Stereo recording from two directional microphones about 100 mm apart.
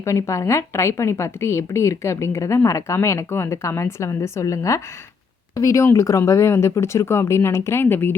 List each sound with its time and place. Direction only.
0.0 s a woman's voice: 30° left (ahead or behind)